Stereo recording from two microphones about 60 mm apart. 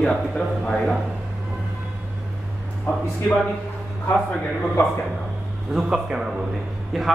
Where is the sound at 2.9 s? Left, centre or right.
Left.